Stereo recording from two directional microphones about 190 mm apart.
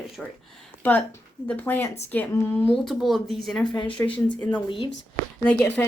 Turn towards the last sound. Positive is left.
turn(degrees=10)  # may be behind; listen again after turning